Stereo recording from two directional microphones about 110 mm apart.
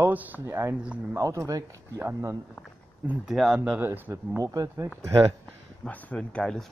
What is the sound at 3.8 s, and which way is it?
Speech, 20° right (ahead or behind).